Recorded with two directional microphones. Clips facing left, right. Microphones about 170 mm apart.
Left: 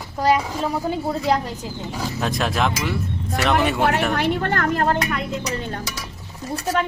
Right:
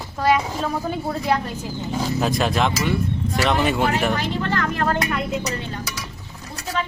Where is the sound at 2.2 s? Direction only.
Centre (ahead or behind).